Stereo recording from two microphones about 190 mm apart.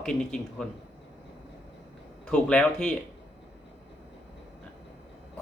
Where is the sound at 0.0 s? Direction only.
5° left (ahead or behind).